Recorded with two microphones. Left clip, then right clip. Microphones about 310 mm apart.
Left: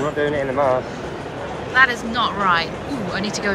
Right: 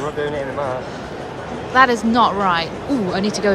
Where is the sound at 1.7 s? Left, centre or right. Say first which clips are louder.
Right 3 dB; centre.